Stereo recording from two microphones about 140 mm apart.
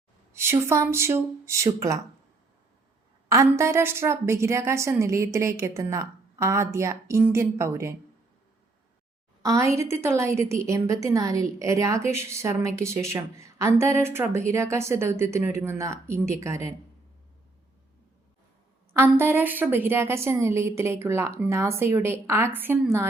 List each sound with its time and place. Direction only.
0.3 s a woman's voice: 20° right (ahead or behind)
3.2 s a woman's voice: 20° right (ahead or behind)
9.4 s a woman's voice: 20° right (ahead or behind)
18.9 s a woman's voice: 15° right (ahead or behind)